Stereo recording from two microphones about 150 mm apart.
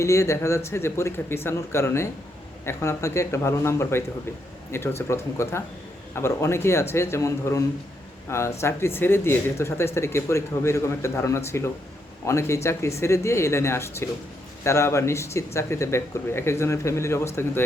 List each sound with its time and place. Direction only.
0.0 s speech: 20° left (ahead or behind)